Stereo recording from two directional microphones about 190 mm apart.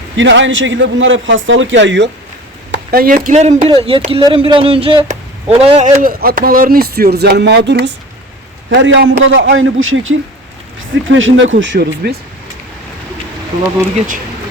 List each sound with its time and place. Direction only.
0.2 s a man's voice: 75° right (ahead or behind)
2.7 s speech: 55° right (ahead or behind); by 5.9 s 30° right (ahead or behind)
6.0 s a man's voice: 50° right (ahead or behind)